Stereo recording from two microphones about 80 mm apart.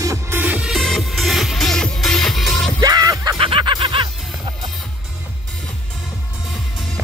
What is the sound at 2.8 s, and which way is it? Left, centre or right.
Music, right.